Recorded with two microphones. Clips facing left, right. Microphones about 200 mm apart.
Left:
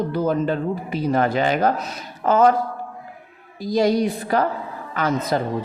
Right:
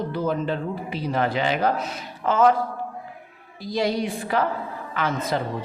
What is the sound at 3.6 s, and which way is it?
A woman's voice, 45° left (ahead or behind).